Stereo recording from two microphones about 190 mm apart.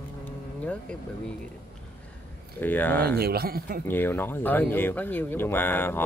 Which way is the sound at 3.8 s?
10° left (ahead or behind).